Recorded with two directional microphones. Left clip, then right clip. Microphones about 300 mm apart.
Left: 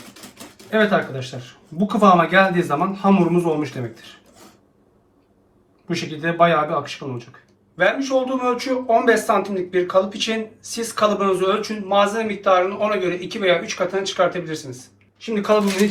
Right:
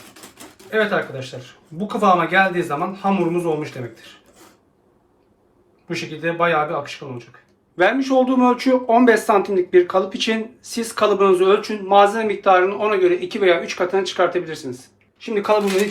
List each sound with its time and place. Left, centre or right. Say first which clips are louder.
0.7 s a man's voice: left 1 dB; centre
5.9 s a man's voice: even; centre
7.8 s speech: right 2 dB; right